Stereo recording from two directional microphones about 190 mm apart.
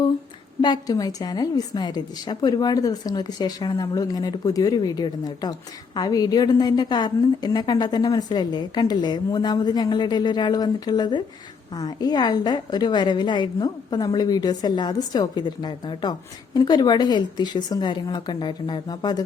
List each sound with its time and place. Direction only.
0.6 s a woman's voice: 20° left (ahead or behind)